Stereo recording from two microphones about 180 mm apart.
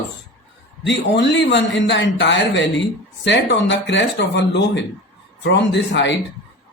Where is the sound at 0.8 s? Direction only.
75° left (ahead or behind).